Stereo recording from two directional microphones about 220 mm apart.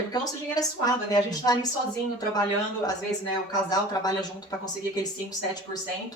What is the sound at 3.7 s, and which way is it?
A woman's voice, 15° left (ahead or behind).